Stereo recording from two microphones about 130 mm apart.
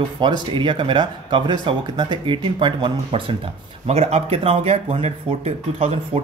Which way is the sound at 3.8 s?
55° right (ahead or behind).